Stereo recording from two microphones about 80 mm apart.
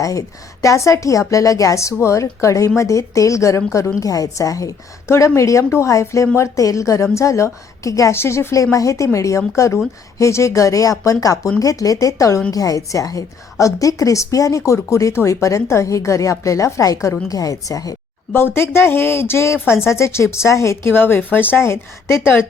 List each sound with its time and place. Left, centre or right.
0.0 s a woman's voice: left
18.3 s a woman's voice: left
20.9 s speech: left